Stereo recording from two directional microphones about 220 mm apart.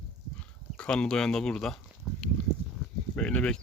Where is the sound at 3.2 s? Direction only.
5° left (ahead or behind).